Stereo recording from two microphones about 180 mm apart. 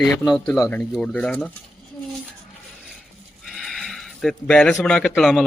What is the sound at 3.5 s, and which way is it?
A woman's voice, centre (ahead or behind).